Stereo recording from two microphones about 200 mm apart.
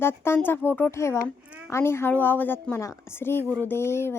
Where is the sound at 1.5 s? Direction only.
5° right (ahead or behind).